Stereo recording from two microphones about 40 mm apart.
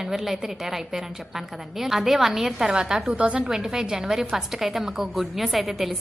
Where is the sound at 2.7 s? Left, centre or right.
Right.